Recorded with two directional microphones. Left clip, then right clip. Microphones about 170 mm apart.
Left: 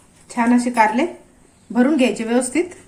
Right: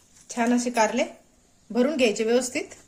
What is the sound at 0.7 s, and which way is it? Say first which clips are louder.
Speech: left 7 dB; 65° right (ahead or behind).